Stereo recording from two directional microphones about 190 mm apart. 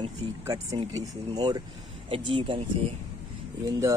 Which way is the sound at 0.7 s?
20° right (ahead or behind).